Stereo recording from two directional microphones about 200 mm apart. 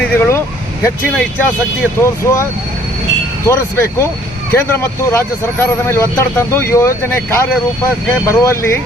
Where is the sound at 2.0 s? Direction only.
15° left (ahead or behind).